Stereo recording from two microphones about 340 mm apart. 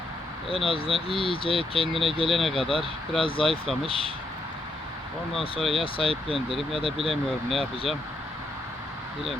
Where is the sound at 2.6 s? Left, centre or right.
Centre.